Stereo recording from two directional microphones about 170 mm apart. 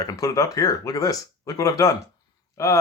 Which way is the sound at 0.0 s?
20° left (ahead or behind).